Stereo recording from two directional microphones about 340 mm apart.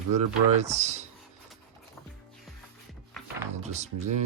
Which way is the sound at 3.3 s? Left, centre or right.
Centre.